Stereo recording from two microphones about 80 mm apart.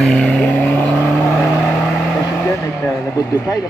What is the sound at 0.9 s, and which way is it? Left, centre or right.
Vehicle, centre.